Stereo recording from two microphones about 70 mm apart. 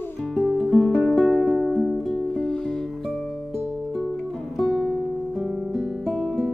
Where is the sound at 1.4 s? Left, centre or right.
Centre.